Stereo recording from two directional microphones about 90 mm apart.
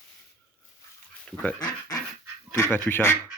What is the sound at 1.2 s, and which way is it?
Speech, 15° left (ahead or behind).